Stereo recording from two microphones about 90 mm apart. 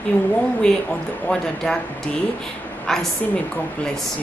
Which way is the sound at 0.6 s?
10° left (ahead or behind).